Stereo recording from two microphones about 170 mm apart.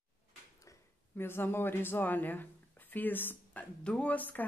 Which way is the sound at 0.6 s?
15° left (ahead or behind).